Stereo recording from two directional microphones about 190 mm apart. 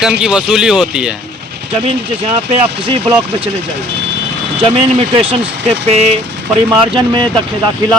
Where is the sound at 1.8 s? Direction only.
30° right (ahead or behind).